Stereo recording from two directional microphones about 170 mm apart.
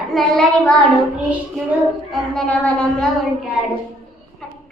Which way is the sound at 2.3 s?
5° left (ahead or behind).